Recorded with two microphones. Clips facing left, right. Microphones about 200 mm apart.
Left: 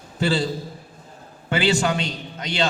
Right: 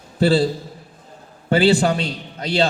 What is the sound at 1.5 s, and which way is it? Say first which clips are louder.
A man's voice: right 5 dB; 35° right (ahead or behind).